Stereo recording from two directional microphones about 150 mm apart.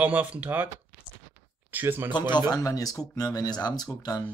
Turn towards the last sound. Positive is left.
turn(degrees=25)  # may be behind; listen again after turning